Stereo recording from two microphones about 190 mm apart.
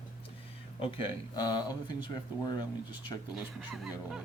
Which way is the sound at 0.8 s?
30° left (ahead or behind).